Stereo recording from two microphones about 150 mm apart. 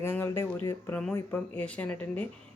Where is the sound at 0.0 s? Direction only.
15° left (ahead or behind).